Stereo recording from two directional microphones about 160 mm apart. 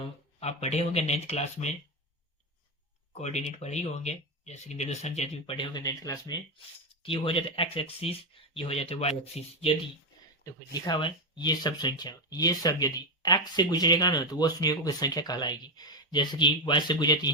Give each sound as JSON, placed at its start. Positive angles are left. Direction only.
{"t": 0.3, "sound": "speech", "side_deg": 40}
{"t": 3.1, "sound": "speech", "side_deg": 45}
{"t": 7.0, "sound": "speech", "side_deg": 35}
{"t": 10.4, "sound": "speech", "side_deg": 25}